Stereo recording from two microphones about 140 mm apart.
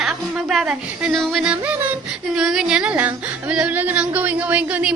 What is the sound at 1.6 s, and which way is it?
Speech, 15° right (ahead or behind).